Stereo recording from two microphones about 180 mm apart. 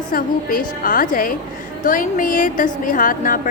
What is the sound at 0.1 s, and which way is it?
A woman's voice, 50° left (ahead or behind).